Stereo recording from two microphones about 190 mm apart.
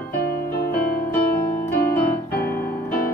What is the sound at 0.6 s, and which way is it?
Music, 55° left (ahead or behind).